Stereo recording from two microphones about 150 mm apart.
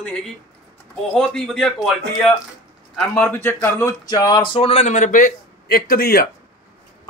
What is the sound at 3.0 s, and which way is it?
Speech, 10° left (ahead or behind).